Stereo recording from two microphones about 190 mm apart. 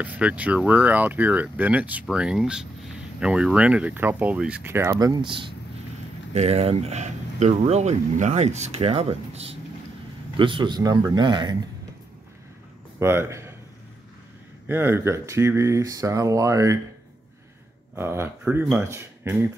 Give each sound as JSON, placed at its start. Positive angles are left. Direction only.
{"t": 0.0, "sound": "a man's voice", "side_deg": -5}
{"t": 13.0, "sound": "a man's voice", "side_deg": -15}
{"t": 14.7, "sound": "speech", "side_deg": -10}
{"t": 17.9, "sound": "speech", "side_deg": -10}